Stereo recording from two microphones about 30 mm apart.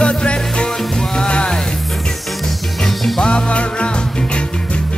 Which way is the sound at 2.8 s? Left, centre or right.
Centre.